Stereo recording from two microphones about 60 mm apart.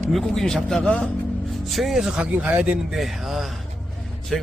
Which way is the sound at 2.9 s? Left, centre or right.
Centre.